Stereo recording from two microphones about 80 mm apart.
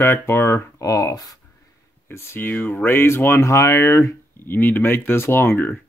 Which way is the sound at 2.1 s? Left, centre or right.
Left.